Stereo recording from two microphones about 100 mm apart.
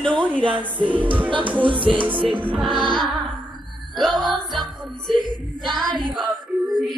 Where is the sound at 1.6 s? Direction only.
60° right (ahead or behind).